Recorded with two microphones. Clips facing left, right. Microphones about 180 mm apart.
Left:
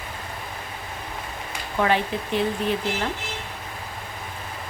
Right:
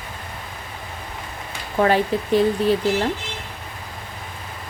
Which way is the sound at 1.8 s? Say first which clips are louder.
Right 4 dB; 40° right (ahead or behind).